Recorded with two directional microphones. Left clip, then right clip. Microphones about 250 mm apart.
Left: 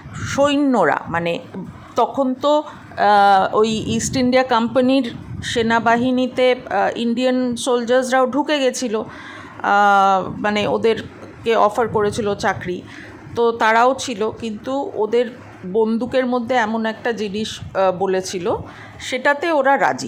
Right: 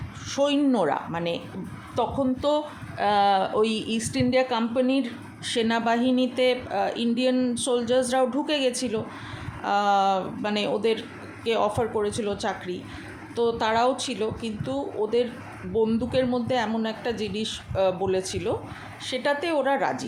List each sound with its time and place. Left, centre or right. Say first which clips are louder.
0.3 s speech: left 7 dB; centre